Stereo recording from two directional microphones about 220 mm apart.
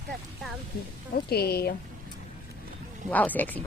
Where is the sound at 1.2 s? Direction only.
45° left (ahead or behind).